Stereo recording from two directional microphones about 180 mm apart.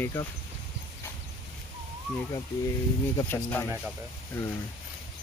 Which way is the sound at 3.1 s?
10° left (ahead or behind).